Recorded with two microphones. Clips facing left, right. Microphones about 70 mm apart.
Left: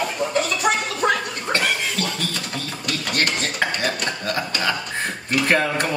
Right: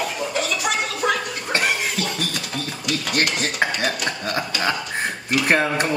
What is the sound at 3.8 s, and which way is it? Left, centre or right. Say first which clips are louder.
Speech: even; centre.